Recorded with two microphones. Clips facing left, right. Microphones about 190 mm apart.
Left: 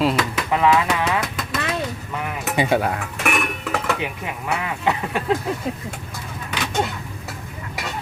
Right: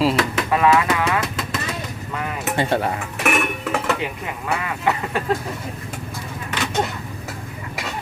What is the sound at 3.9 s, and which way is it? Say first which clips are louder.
Speech: even; 20° left (ahead or behind).